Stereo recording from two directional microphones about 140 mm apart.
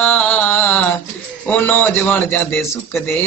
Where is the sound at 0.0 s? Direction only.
10° left (ahead or behind).